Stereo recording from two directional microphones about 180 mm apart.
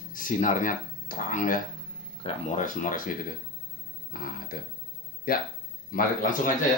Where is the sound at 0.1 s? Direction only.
45° left (ahead or behind).